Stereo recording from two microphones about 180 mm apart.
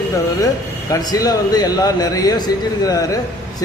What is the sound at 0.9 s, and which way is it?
A man's voice, 20° left (ahead or behind).